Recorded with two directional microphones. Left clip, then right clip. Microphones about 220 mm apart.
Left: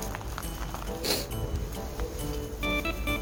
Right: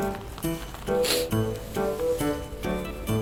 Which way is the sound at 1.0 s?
Centre (ahead or behind).